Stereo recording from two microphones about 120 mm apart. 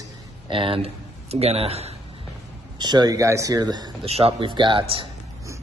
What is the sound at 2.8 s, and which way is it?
A man's voice, 35° right (ahead or behind).